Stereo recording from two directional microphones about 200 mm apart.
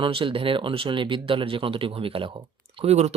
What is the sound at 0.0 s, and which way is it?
Speech, 25° right (ahead or behind).